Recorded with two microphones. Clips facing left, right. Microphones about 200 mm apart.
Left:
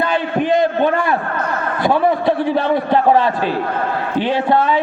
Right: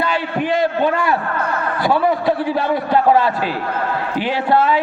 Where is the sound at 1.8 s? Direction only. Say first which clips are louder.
Left 2 dB; 20° left (ahead or behind).